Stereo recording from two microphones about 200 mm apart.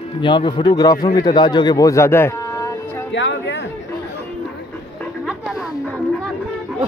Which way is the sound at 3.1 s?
65° left (ahead or behind).